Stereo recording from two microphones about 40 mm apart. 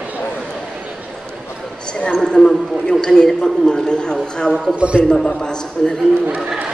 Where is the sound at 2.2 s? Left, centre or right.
Centre.